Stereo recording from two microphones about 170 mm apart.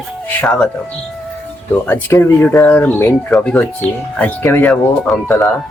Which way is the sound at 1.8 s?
10° left (ahead or behind).